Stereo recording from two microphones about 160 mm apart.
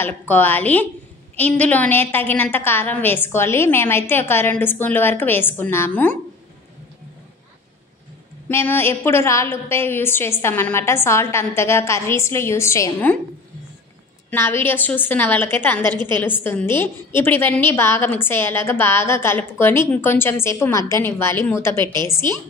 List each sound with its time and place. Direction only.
0.0 s a woman's voice: 10° left (ahead or behind)
8.5 s a woman's voice: 15° left (ahead or behind)
14.3 s a woman's voice: 15° left (ahead or behind)